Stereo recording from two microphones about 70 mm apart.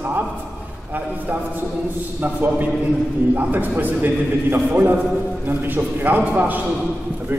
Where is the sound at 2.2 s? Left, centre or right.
Right.